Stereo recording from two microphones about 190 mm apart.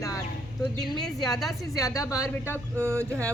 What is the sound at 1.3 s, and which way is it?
Speech, centre (ahead or behind).